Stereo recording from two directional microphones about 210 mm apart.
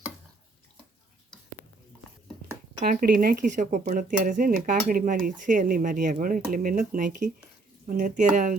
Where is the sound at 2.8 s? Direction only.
45° right (ahead or behind).